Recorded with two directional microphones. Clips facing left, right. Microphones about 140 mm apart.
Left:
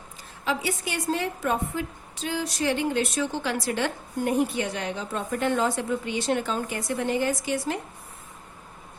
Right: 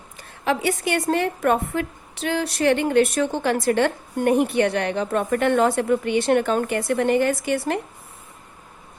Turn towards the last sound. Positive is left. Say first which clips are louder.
# right 5 dB
turn(degrees=-60)  # may be behind; listen again after turning